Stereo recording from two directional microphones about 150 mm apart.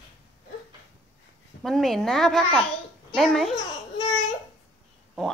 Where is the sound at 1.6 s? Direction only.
Centre (ahead or behind).